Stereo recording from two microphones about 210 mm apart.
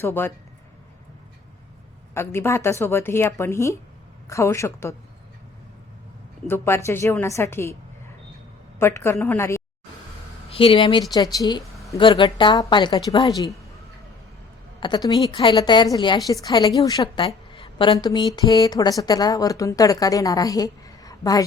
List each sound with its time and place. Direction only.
0.0 s a woman's voice: 10° left (ahead or behind)
2.1 s a woman's voice: 10° left (ahead or behind)
6.5 s a woman's voice: 10° left (ahead or behind)
8.8 s a woman's voice: 10° left (ahead or behind)
10.5 s a woman's voice: 25° left (ahead or behind)
14.8 s a woman's voice: 20° left (ahead or behind)